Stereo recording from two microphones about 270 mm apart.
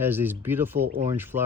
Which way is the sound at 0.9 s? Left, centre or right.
Centre.